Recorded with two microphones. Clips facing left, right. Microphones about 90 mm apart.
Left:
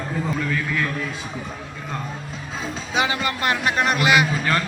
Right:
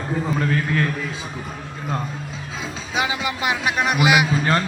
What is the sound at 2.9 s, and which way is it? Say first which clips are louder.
A man's voice: left 1 dB; 5° right (ahead or behind).